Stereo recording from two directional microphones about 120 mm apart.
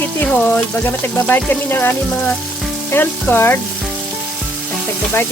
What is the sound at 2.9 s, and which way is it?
Frying, 15° left (ahead or behind).